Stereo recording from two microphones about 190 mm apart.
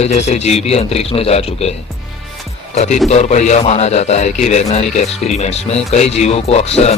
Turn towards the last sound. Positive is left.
turn(degrees=35)  # may be behind; listen again after turning